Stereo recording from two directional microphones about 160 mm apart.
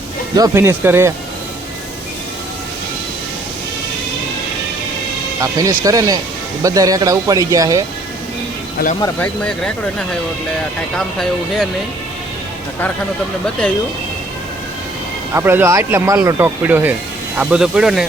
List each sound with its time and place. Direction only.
0.3 s speech: 20° right (ahead or behind)
5.4 s speech: 20° right (ahead or behind)
9.1 s speech: 5° left (ahead or behind)
10.9 s speech: centre (ahead or behind)
15.4 s speech: 15° right (ahead or behind)